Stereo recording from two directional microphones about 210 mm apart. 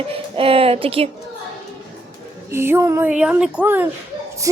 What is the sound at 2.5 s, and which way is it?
A woman's voice, 10° right (ahead or behind).